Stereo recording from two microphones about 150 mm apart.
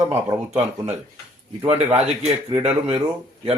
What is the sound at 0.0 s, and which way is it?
Speech, 25° right (ahead or behind).